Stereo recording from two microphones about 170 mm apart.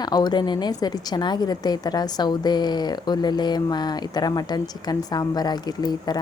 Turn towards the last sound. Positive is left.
turn(degrees=25)  # may be behind; listen again after turning